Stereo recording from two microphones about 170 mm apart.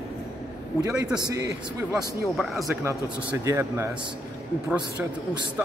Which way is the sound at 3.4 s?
15° right (ahead or behind).